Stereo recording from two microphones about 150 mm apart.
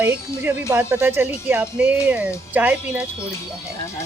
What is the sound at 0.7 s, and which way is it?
Speech, 10° right (ahead or behind).